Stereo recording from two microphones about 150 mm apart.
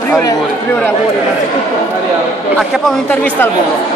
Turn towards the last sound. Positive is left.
turn(degrees=10)  # may be behind; listen again after turning